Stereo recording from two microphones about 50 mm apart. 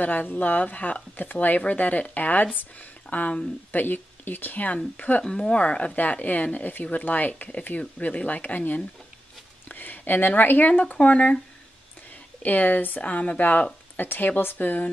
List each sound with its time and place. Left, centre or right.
0.0 s speech: left
5.2 s speech: centre; by 8.8 s left
9.7 s a sound: left
10.7 s a woman's voice: left
12.4 s a woman's voice: left